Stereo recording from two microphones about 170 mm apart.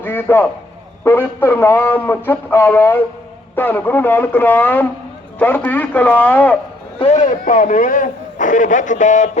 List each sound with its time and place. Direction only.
0.0 s a man's voice: 10° left (ahead or behind)
7.0 s a man's voice: 45° left (ahead or behind)